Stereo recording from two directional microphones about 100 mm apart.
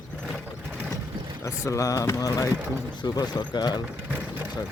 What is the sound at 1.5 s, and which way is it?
Speech, 30° left (ahead or behind).